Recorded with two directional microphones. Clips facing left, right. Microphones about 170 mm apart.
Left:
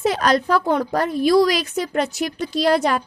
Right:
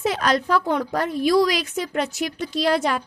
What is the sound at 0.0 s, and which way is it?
A woman's voice, 40° left (ahead or behind).